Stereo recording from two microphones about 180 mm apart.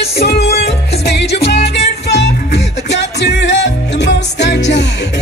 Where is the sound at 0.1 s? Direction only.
65° left (ahead or behind).